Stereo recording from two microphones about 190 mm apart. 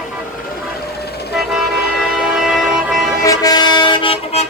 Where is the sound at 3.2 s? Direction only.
20° left (ahead or behind).